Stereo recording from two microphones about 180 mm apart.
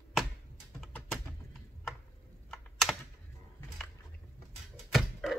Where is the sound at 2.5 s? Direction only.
Centre (ahead or behind).